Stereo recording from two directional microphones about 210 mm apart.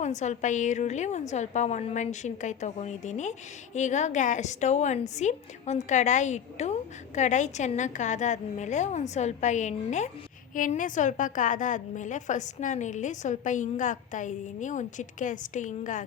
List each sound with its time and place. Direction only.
0.0 s a woman's voice: 35° left (ahead or behind)